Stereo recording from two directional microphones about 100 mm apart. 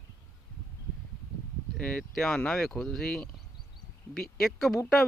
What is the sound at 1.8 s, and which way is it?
A man's voice, 10° left (ahead or behind).